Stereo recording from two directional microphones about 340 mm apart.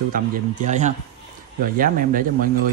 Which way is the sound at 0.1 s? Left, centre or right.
Right.